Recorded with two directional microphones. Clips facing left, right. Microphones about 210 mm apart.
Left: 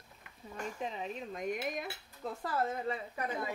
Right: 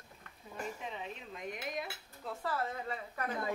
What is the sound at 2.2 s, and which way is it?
Speech, 40° left (ahead or behind).